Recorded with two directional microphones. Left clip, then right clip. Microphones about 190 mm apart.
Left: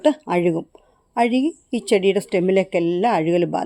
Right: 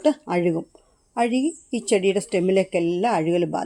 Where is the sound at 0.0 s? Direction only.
15° left (ahead or behind).